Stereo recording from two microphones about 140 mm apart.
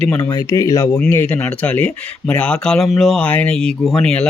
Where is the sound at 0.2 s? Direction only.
25° left (ahead or behind).